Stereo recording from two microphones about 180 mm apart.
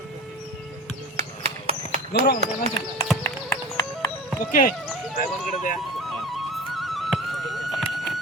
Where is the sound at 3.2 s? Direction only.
20° left (ahead or behind).